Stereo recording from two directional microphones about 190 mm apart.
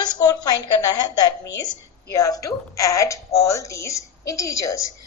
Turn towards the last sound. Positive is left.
turn(degrees=15)  # may be behind; listen again after turning